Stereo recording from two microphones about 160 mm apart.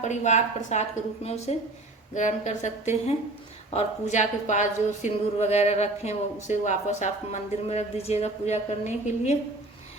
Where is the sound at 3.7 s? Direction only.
50° left (ahead or behind).